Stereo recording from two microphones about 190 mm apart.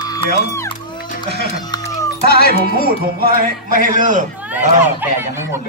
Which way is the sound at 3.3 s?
45° right (ahead or behind).